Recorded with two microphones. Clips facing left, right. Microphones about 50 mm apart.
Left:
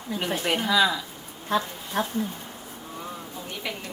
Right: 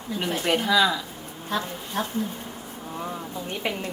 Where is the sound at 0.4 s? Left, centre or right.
Centre.